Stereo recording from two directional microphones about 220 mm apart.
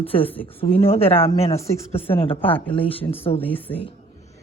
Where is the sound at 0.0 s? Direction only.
25° left (ahead or behind).